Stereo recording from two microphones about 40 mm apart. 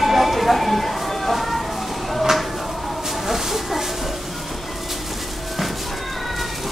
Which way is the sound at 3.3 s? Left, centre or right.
Centre.